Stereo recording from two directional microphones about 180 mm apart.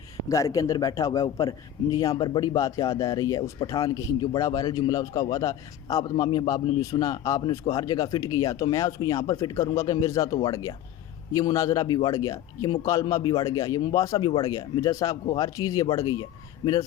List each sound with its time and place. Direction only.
0.3 s a man's voice: 20° left (ahead or behind)